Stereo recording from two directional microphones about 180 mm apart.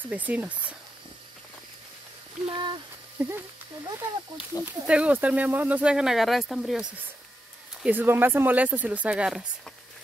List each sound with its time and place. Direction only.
0.0 s speech: 10° right (ahead or behind)
2.4 s speech: 25° right (ahead or behind)
3.2 s speech: 10° right (ahead or behind)
4.5 s speech: 20° left (ahead or behind)
4.8 s speech: 5° right (ahead or behind)